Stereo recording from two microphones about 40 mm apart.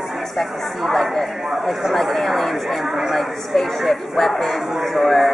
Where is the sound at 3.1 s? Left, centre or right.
Centre.